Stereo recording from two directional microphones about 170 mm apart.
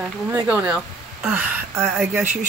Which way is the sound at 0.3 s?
15° right (ahead or behind).